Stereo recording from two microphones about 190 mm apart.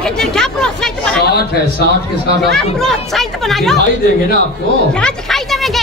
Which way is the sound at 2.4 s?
Centre (ahead or behind).